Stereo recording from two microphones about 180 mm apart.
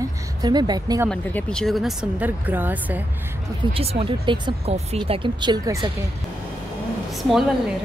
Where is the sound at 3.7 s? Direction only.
30° right (ahead or behind).